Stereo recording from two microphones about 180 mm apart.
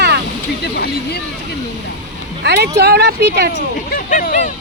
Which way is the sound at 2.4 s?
65° right (ahead or behind).